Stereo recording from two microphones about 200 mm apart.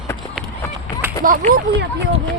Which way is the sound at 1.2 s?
45° right (ahead or behind).